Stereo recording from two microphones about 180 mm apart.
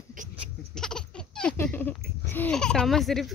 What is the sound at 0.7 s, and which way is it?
Baby laughter, 5° left (ahead or behind).